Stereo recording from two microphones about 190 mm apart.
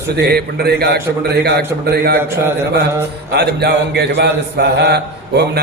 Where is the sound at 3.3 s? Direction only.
60° right (ahead or behind).